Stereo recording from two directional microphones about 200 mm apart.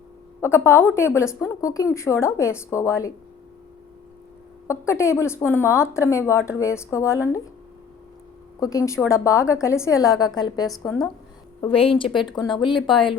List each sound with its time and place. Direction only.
0.4 s speech: 10° left (ahead or behind)
4.7 s speech: 15° left (ahead or behind)
8.6 s speech: 15° left (ahead or behind)